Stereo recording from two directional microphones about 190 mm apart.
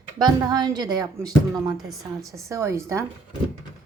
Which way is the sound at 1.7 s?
Centre (ahead or behind).